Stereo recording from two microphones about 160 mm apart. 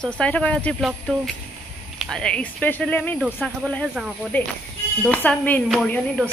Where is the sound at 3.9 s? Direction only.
5° right (ahead or behind).